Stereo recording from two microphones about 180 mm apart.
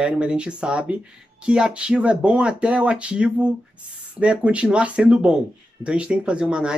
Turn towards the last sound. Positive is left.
turn(degrees=-5)  # may be behind; listen again after turning